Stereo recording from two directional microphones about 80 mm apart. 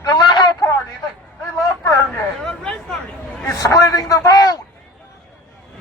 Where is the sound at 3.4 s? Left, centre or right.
Left.